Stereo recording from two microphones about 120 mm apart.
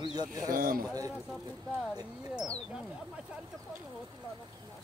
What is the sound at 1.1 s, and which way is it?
Speech, 5° right (ahead or behind).